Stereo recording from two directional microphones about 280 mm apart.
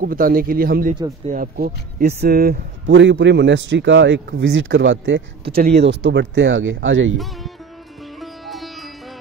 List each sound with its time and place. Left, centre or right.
0.0 s speech: right
8.2 s sitar: centre